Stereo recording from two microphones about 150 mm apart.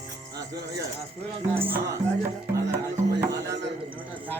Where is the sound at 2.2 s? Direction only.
20° right (ahead or behind).